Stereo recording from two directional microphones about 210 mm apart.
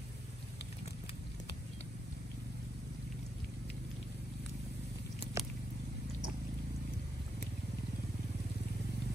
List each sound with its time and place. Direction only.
5.2 s biting: 30° left (ahead or behind)